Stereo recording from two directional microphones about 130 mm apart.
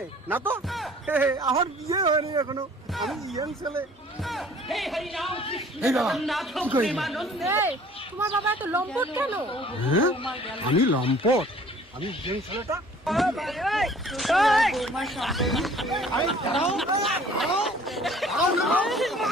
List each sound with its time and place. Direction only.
0.3 s speech: 15° right (ahead or behind)
0.7 s music: centre (ahead or behind)
1.1 s speech: 15° right (ahead or behind)
1.9 s a man's voice: 35° right (ahead or behind)
2.9 s speech: centre (ahead or behind)
3.3 s speech: 25° right (ahead or behind)
4.2 s speech: centre (ahead or behind)
5.3 s speech: 45° left (ahead or behind)
5.8 s speech: centre (ahead or behind)
7.4 s speech: 15° right (ahead or behind)
9.5 s speech: 45° left (ahead or behind)
13.1 s speech: centre (ahead or behind)